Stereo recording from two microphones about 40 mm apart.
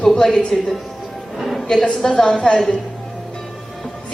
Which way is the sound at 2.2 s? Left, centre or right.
Centre.